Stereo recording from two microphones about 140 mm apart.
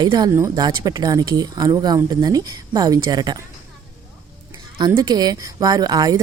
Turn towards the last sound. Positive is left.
turn(degrees=-30)  # may be behind; listen again after turning